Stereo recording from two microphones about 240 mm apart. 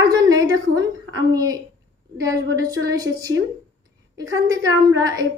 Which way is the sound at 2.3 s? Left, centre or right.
Centre.